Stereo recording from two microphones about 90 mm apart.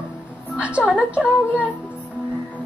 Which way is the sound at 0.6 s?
15° right (ahead or behind).